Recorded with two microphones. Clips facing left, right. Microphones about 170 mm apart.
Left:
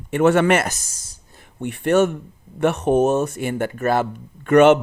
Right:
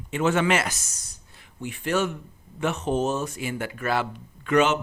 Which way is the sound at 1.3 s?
55° left (ahead or behind).